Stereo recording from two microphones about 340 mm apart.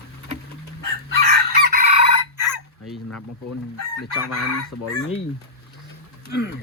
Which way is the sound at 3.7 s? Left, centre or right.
Left.